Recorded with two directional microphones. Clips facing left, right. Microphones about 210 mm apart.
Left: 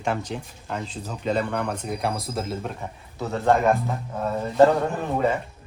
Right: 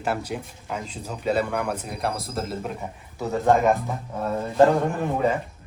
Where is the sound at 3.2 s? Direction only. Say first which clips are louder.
Right 1 dB; 15° right (ahead or behind).